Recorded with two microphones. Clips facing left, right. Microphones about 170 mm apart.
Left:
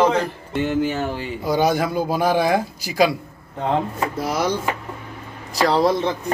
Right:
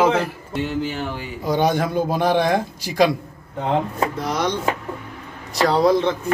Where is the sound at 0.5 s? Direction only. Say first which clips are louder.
Left 4 dB; 50° left (ahead or behind).